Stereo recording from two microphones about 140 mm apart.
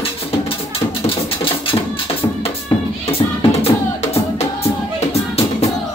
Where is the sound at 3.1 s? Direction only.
50° left (ahead or behind).